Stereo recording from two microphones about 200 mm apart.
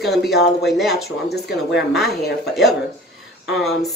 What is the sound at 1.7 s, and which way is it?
Speech, centre (ahead or behind).